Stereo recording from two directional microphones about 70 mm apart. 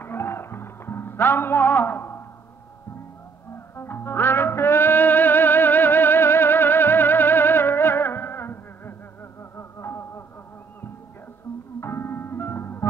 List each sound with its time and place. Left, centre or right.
0.0 s music: left
3.5 s music: left
11.8 s music: left